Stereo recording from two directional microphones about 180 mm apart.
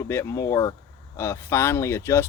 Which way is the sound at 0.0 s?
15° left (ahead or behind).